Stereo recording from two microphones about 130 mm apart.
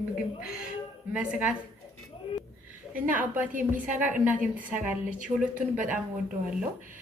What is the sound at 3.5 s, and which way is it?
Speech, 85° right.